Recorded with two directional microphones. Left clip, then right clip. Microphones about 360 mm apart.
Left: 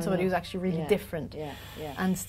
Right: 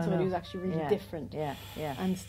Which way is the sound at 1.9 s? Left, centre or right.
Left.